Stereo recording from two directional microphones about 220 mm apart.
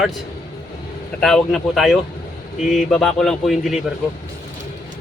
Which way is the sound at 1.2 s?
Centre (ahead or behind).